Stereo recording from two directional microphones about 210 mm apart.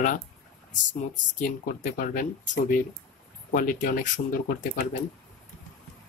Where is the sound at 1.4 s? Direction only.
35° left (ahead or behind).